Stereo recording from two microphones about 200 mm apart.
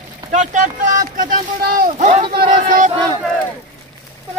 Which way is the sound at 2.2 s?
25° right (ahead or behind).